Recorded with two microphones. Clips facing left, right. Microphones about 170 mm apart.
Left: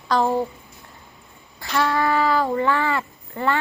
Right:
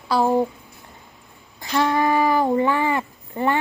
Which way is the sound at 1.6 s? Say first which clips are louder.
Right 2 dB; 20° right (ahead or behind).